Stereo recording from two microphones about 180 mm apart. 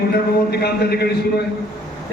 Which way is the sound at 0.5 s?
60° left (ahead or behind).